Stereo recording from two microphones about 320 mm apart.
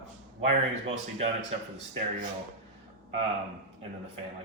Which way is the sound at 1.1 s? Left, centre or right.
Centre.